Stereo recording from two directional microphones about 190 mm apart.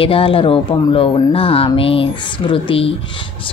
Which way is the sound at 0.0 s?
30° left (ahead or behind).